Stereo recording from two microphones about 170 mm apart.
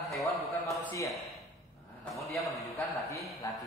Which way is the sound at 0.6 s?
Centre (ahead or behind).